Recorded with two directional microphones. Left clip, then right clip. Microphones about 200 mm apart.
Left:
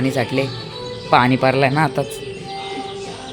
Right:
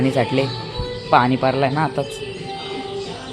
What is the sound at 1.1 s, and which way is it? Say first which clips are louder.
Speech: left 1 dB; 15° left (ahead or behind).